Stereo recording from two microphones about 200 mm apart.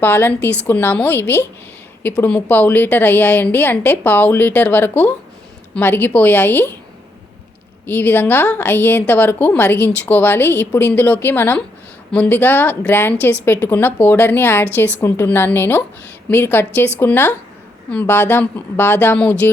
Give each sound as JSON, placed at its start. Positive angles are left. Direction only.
{"t": 0.0, "sound": "a woman's voice", "side_deg": 10}
{"t": 7.9, "sound": "a woman's voice", "side_deg": 10}